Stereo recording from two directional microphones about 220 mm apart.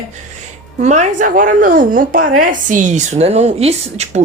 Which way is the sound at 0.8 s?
30° right (ahead or behind).